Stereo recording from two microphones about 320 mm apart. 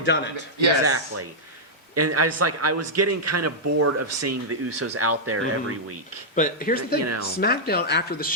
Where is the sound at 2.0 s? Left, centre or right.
Right.